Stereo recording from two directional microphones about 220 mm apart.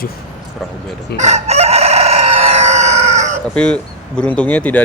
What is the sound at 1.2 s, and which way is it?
Chicken, 30° right (ahead or behind).